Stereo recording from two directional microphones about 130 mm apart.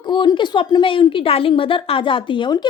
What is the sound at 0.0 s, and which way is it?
A woman's voice, 35° left (ahead or behind).